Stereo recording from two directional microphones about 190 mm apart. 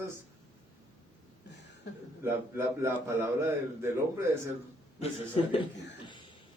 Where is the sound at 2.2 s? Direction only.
10° right (ahead or behind).